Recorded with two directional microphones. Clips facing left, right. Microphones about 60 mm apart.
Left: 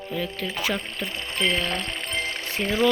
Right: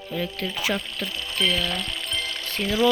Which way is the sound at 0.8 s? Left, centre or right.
Left.